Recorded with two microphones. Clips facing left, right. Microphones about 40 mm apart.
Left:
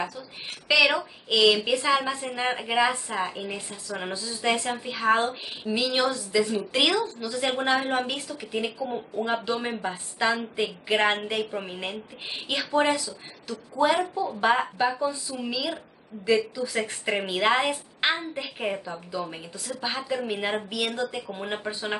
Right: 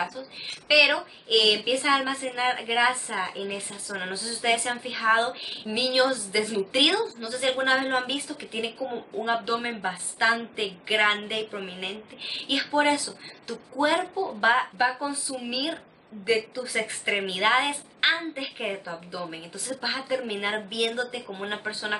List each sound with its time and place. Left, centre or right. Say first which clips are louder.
0.7 s a woman's voice: right 1 dB; centre